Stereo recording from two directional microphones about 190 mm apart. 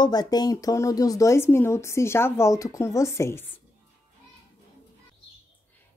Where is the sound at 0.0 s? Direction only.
20° left (ahead or behind).